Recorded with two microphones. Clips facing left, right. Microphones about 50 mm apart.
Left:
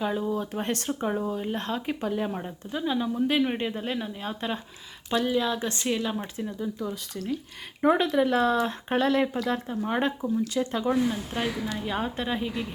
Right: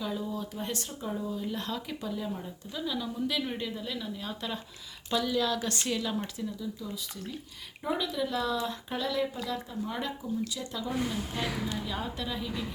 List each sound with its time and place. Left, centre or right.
0.0 s speech: left
2.7 s a woman's voice: left
6.6 s speech: left